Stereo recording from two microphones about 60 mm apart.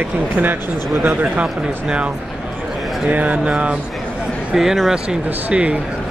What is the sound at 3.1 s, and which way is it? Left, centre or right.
Speech, right.